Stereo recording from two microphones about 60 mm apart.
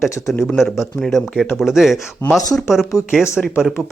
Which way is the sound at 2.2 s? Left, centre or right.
Left.